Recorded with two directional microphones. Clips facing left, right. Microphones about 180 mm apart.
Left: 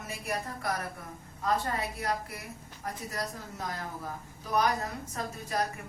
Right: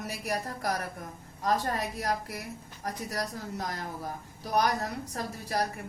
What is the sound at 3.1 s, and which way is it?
A woman's voice, 40° right (ahead or behind).